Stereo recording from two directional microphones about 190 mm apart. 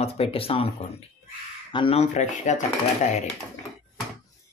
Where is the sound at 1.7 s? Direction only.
30° left (ahead or behind).